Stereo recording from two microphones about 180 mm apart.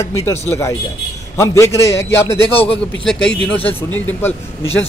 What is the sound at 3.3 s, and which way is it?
A man's voice, 5° left (ahead or behind).